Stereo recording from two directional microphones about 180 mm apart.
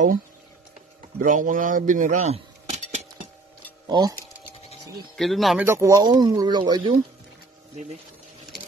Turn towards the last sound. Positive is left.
turn(degrees=-25)  # may be behind; listen again after turning